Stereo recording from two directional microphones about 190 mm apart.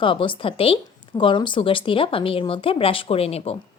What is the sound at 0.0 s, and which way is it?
Speech, 25° left (ahead or behind).